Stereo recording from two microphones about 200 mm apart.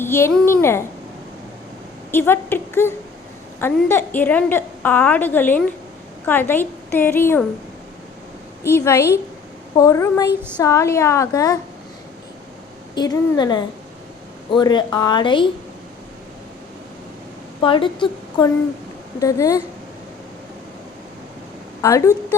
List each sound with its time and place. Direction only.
0.0 s a woman's voice: 10° left (ahead or behind)
2.1 s a woman's voice: 10° left (ahead or behind)
8.6 s a woman's voice: 10° left (ahead or behind)
12.9 s speech: 20° left (ahead or behind)
17.6 s a woman's voice: 25° left (ahead or behind)
21.8 s a woman's voice: 15° left (ahead or behind)